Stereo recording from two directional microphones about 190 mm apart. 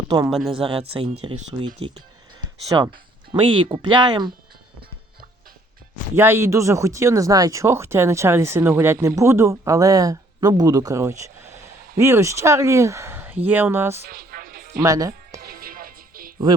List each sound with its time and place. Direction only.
0.3 s speech: centre (ahead or behind)
0.6 s speech: 30° right (ahead or behind)
2.4 s a sound: 20° right (ahead or behind)
3.4 s speech: 25° right (ahead or behind)
6.1 s speech: 10° right (ahead or behind)
14.0 s music: 50° right (ahead or behind)
14.8 s speech: 20° right (ahead or behind)
15.4 s music: 55° right (ahead or behind)